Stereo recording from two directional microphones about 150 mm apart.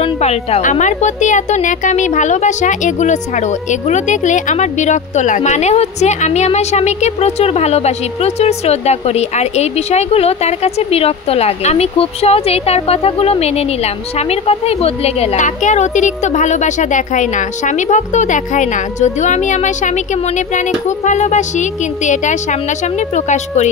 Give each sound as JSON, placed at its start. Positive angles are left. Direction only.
{"t": 0.0, "sound": "a woman's voice", "side_deg": 45}